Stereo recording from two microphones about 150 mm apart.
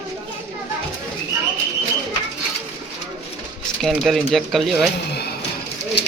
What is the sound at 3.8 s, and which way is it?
Speech, centre (ahead or behind).